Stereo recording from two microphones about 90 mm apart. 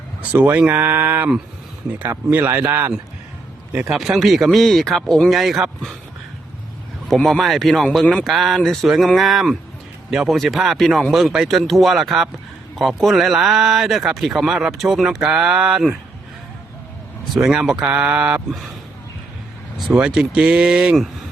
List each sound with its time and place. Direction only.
0.2 s speech: 20° right (ahead or behind)
3.9 s speech: 5° right (ahead or behind)
7.1 s speech: 5° left (ahead or behind)
17.3 s speech: 5° right (ahead or behind)
19.9 s speech: 10° right (ahead or behind)